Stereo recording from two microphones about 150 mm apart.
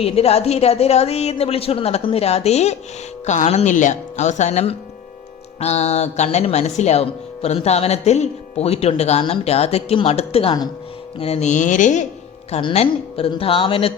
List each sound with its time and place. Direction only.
0.0 s a woman's voice: 45° left (ahead or behind)
12.5 s speech: 45° left (ahead or behind)